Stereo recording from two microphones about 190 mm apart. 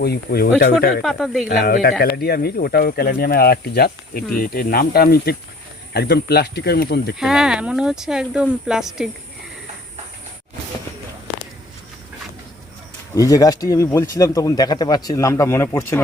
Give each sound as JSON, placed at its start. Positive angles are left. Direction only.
{"t": 0.0, "sound": "speech", "side_deg": 55}
{"t": 1.0, "sound": "speech", "side_deg": -5}
{"t": 1.5, "sound": "speech", "side_deg": 55}
{"t": 7.2, "sound": "speech", "side_deg": 0}
{"t": 13.1, "sound": "speech", "side_deg": 20}